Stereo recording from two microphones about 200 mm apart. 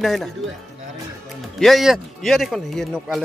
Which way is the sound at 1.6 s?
Centre (ahead or behind).